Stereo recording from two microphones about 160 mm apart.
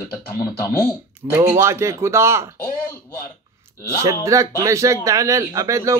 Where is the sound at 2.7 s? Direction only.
15° left (ahead or behind).